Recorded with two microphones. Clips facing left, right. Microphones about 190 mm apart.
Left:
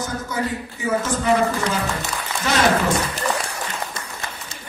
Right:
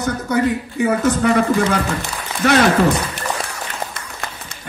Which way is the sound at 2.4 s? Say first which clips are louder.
Right 8 dB; 60° right (ahead or behind).